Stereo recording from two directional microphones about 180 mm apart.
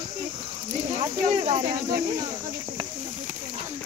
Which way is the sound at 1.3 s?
40° right (ahead or behind).